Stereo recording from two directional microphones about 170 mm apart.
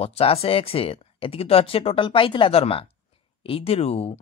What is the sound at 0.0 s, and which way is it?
Speech, 35° left (ahead or behind).